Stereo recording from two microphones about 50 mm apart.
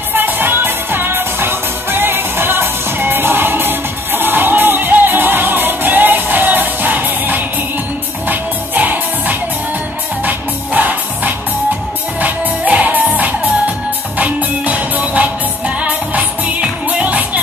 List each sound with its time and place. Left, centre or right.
0.1 s music: right